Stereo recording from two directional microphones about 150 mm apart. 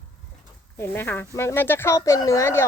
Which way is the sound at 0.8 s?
15° left (ahead or behind).